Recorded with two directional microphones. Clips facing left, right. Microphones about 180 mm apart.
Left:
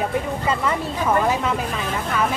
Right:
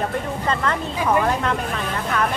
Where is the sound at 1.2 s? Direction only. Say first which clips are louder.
Left 1 dB; 5° left (ahead or behind).